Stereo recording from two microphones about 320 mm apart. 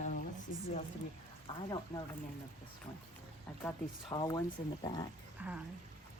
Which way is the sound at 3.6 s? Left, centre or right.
Centre.